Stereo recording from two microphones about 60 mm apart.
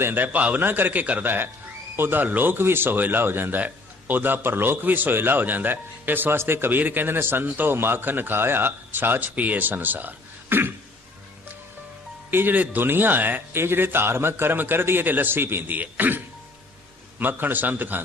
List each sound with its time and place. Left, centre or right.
0.0 s a man's voice: right
12.3 s a man's voice: right